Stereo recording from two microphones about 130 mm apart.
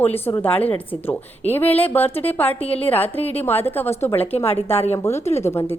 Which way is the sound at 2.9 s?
15° left (ahead or behind).